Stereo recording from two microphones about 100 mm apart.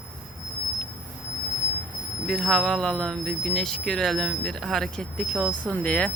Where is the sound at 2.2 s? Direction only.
5° left (ahead or behind).